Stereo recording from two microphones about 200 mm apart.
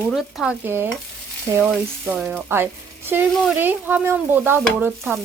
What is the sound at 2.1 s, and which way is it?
Speech, 10° right (ahead or behind).